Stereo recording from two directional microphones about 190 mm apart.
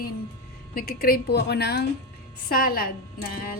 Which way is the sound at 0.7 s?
50° left (ahead or behind).